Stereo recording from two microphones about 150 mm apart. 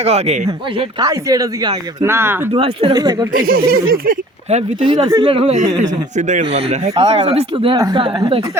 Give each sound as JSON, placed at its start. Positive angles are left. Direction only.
{"t": 0.0, "sound": "speech", "side_deg": -45}
{"t": 0.8, "sound": "speech", "side_deg": -25}
{"t": 2.5, "sound": "speech", "side_deg": -40}
{"t": 2.9, "sound": "speech", "side_deg": -25}
{"t": 3.3, "sound": "speech", "side_deg": -75}
{"t": 4.4, "sound": "speech", "side_deg": -45}
{"t": 5.0, "sound": "speech", "side_deg": -30}
{"t": 6.4, "sound": "speech", "side_deg": -40}
{"t": 7.8, "sound": "speech", "side_deg": -25}
{"t": 8.0, "sound": "speech", "side_deg": -35}